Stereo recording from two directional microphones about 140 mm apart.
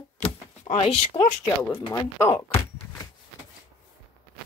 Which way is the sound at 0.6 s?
45° left (ahead or behind).